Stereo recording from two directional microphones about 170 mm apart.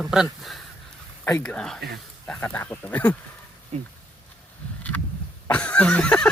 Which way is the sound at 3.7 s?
45° right (ahead or behind).